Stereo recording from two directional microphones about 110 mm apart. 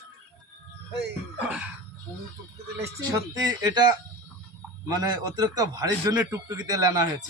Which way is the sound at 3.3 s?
35° right (ahead or behind).